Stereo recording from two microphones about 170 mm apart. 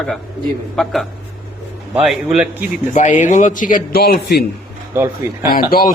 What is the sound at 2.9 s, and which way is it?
A man's voice, 45° left (ahead or behind).